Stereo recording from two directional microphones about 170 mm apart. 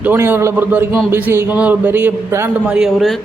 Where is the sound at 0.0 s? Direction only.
10° right (ahead or behind).